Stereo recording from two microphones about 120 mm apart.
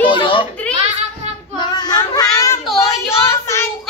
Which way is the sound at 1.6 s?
35° left (ahead or behind).